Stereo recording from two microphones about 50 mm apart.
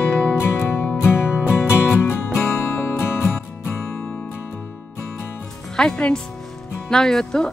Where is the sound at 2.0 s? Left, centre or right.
Left.